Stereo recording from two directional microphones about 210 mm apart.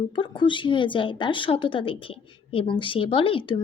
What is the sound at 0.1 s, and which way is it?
A child's voice, 25° left (ahead or behind).